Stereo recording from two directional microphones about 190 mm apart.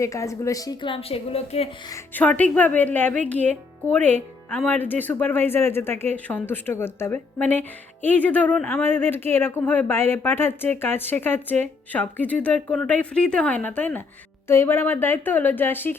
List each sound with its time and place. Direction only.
0.0 s a woman's voice: 15° left (ahead or behind); by 1.7 s 30° left (ahead or behind)
1.9 s speech: 10° left (ahead or behind)